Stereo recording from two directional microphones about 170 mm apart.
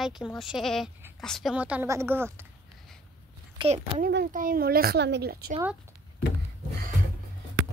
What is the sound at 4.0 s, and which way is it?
A woman's voice, 65° right (ahead or behind).